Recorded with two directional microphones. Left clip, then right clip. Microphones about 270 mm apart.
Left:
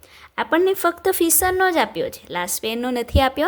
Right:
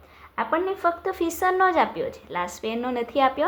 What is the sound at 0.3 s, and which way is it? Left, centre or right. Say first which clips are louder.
A woman's voice: left 6 dB; left.